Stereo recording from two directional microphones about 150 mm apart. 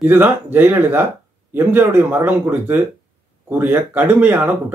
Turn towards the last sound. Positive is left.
turn(degrees=-10)  # may be behind; listen again after turning